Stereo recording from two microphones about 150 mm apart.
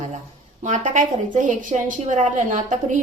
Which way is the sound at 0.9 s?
60° right (ahead or behind).